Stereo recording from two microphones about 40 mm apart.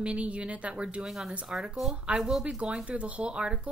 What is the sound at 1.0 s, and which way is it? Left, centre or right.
Speech, centre.